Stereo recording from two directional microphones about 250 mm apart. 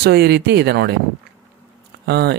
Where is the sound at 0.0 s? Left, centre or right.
Right.